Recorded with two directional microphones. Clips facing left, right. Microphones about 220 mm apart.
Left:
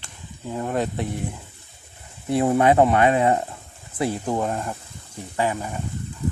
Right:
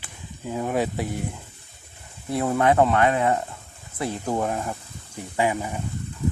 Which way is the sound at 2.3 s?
20° left (ahead or behind).